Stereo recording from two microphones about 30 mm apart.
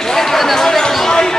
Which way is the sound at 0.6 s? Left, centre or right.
Left.